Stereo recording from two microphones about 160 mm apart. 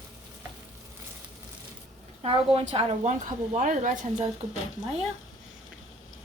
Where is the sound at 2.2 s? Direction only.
35° right (ahead or behind); by 4.3 s 50° right (ahead or behind).